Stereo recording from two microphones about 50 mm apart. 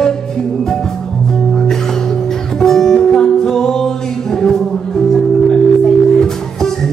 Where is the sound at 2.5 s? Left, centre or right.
Centre.